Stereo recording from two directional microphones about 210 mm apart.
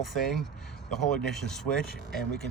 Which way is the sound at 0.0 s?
Centre (ahead or behind).